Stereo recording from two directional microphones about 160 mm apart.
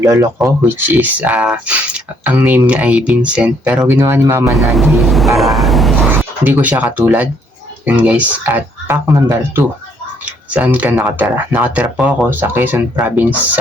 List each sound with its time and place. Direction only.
0.0 s speech: 20° right (ahead or behind)
4.5 s speech: centre (ahead or behind)
5.4 s train: centre (ahead or behind)
6.1 s speech: 10° right (ahead or behind)